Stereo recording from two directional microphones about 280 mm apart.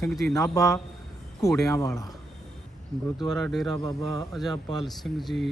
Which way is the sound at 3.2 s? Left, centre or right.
Centre.